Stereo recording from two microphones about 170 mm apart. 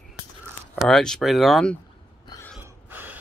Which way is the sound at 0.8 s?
5° left (ahead or behind).